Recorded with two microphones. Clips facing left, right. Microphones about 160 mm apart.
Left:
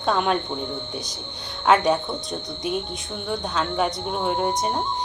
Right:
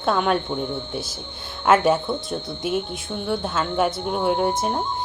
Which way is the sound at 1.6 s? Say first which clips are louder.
Right 1 dB; 5° right (ahead or behind).